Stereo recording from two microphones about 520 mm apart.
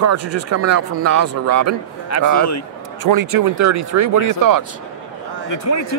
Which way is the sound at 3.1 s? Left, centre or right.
Right.